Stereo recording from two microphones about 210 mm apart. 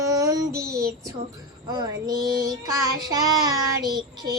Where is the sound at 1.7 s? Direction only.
20° right (ahead or behind).